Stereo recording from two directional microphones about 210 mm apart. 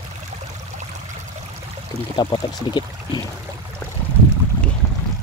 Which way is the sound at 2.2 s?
20° left (ahead or behind).